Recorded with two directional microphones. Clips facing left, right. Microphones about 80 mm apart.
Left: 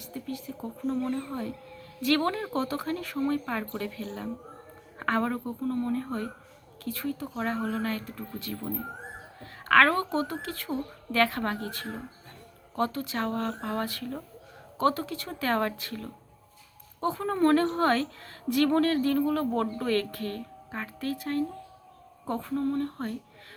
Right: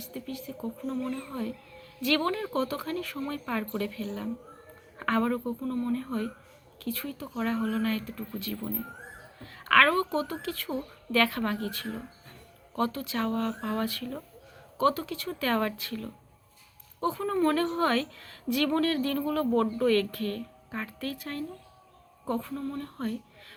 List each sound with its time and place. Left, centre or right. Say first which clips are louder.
0.1 s a woman's voice: left 2 dB; left